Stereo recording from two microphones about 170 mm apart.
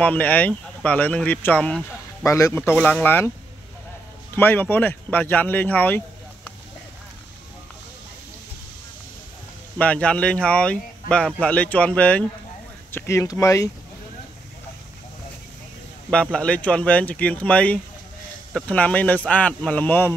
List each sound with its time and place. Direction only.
0.0 s speech: 10° left (ahead or behind)
4.4 s speech: 10° left (ahead or behind)
9.8 s speech: 5° left (ahead or behind)
16.1 s speech: 5° left (ahead or behind)